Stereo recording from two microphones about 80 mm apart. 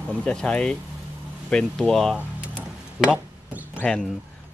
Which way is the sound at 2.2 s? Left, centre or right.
Centre.